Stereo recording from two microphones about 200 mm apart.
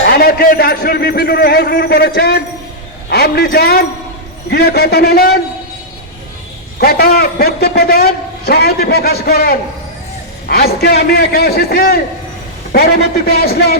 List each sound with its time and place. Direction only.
0.1 s a man's voice: 50° left (ahead or behind)
6.7 s a man's voice: 50° left (ahead or behind)